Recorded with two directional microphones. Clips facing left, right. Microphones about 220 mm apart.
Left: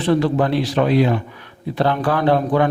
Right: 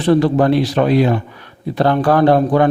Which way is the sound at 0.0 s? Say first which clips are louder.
Right 4 dB; 40° right (ahead or behind).